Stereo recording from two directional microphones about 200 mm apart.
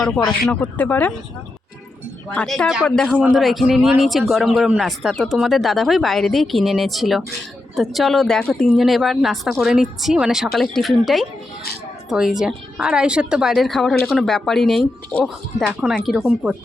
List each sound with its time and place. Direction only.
0.4 s speech: 10° left (ahead or behind)
2.3 s speech: 5° left (ahead or behind)